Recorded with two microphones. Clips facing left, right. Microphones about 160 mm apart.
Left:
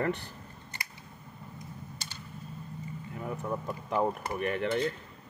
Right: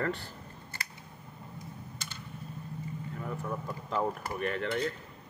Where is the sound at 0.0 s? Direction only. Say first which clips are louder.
Left 2 dB; 20° left (ahead or behind).